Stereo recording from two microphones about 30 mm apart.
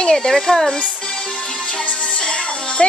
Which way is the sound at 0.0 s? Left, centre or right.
Left.